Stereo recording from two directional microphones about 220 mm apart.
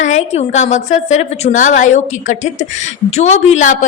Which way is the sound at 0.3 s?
30° left (ahead or behind).